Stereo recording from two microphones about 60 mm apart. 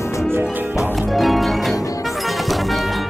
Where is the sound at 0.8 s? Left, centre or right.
Centre.